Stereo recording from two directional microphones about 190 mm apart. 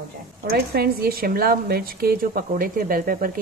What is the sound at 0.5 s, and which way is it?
A woman's voice, 55° right (ahead or behind).